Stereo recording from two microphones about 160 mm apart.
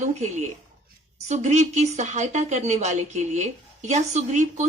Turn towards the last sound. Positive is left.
turn(degrees=-45)  # may be behind; listen again after turning